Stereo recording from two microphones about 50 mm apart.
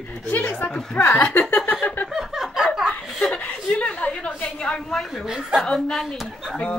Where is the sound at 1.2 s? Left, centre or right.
Left.